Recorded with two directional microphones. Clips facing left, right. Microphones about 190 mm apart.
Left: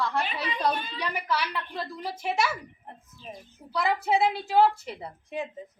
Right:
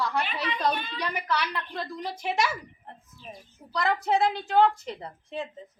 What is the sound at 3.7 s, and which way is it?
Speech, 5° left (ahead or behind).